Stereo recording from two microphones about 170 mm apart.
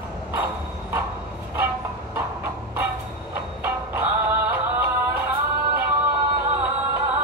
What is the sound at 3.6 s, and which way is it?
Music, 10° right (ahead or behind).